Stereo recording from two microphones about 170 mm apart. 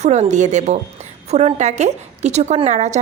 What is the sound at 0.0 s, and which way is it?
A woman's voice, 40° right (ahead or behind).